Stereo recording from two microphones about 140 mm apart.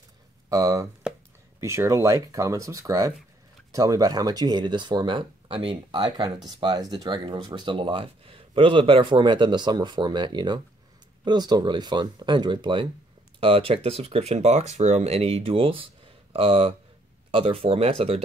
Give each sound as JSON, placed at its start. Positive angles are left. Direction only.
{"t": 0.5, "sound": "speech", "side_deg": -25}